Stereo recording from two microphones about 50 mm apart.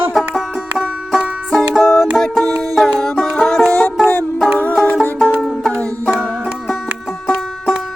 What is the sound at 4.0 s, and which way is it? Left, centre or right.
Music, centre.